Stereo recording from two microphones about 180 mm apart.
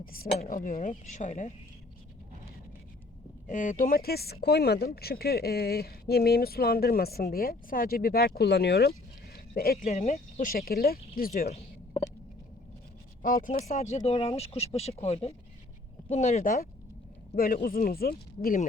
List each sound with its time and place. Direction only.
0.0 s speech: 55° left (ahead or behind)
3.4 s speech: 45° left (ahead or behind)
9.9 s speech: 35° left (ahead or behind); by 11.4 s 55° left (ahead or behind)
11.4 s a sound: 35° left (ahead or behind)
13.2 s speech: 50° left (ahead or behind)